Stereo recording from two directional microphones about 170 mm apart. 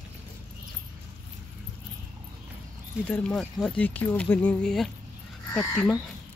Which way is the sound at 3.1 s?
10° left (ahead or behind).